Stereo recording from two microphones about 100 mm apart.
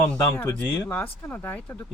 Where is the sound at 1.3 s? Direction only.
15° left (ahead or behind).